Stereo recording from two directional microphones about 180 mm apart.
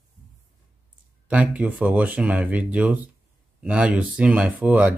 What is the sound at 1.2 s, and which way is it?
Speech, 5° right (ahead or behind).